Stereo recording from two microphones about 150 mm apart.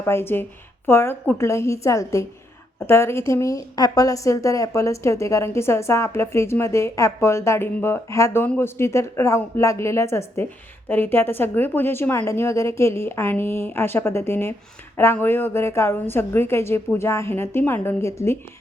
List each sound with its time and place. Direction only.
0.0 s a woman's voice: 15° left (ahead or behind)